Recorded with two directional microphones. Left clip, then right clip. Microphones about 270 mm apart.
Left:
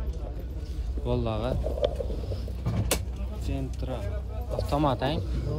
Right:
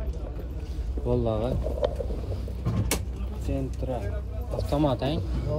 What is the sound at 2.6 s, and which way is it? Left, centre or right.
Vehicle, centre.